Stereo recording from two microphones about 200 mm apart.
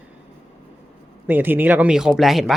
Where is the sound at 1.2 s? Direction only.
10° right (ahead or behind).